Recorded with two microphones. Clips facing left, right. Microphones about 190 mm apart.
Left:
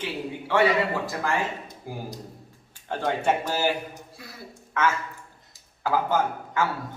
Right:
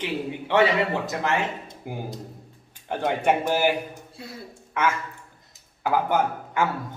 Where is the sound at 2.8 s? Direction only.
15° right (ahead or behind).